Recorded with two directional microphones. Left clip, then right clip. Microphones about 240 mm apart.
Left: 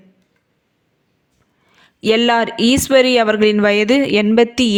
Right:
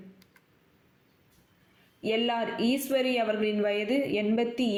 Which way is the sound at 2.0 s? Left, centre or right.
Left.